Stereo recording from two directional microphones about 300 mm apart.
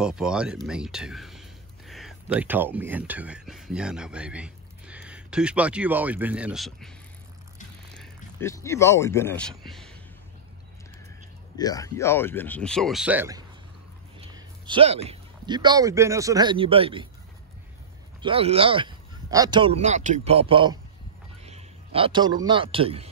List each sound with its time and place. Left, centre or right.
0.0 s speech: centre
7.9 s speech: centre
11.5 s speech: centre
18.2 s a man's voice: centre